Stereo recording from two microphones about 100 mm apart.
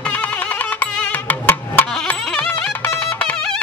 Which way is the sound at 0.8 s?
20° left (ahead or behind).